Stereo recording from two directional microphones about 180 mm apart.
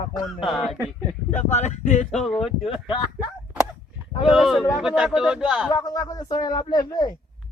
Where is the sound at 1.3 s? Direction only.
40° left (ahead or behind).